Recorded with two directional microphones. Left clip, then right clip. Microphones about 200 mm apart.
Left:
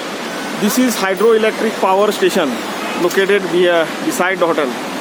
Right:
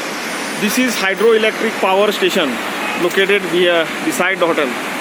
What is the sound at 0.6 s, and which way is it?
Speech, 10° left (ahead or behind).